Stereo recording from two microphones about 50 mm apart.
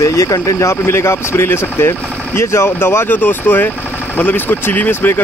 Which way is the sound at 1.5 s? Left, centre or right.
Left.